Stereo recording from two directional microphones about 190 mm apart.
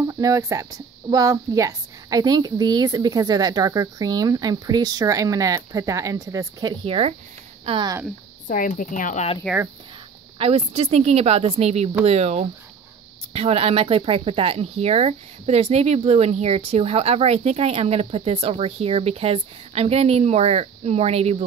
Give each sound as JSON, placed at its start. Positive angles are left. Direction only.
{"t": 0.1, "sound": "speech", "side_deg": -15}
{"t": 8.5, "sound": "speech", "side_deg": 45}
{"t": 10.4, "sound": "speech", "side_deg": -30}